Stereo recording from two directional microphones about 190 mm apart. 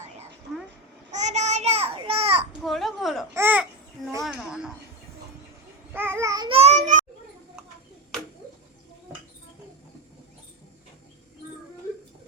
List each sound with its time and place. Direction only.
1.1 s a sound: 35° right (ahead or behind)
2.6 s a woman's voice: centre (ahead or behind)
3.3 s babbling: 10° right (ahead or behind)
4.2 s a woman's voice: 5° right (ahead or behind)
5.9 s babbling: 10° right (ahead or behind)
6.5 s child singing: 35° right (ahead or behind)